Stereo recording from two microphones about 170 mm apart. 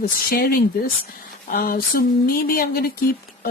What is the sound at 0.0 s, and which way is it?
Speech, 60° left (ahead or behind).